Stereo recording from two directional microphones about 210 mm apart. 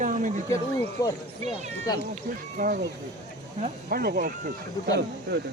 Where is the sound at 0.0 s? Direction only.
35° right (ahead or behind).